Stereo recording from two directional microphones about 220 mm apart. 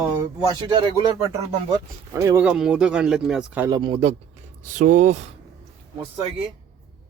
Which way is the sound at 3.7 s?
25° right (ahead or behind).